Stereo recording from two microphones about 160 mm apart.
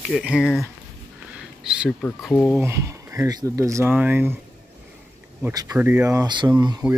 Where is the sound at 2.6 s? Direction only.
15° right (ahead or behind).